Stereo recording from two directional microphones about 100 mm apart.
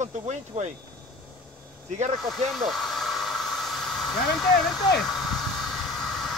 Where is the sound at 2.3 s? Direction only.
Centre (ahead or behind).